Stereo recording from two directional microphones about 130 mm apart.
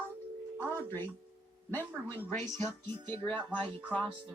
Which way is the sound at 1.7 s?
15° left (ahead or behind).